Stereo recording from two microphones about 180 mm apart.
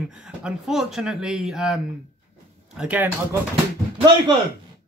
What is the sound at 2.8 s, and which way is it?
Speech, 10° right (ahead or behind).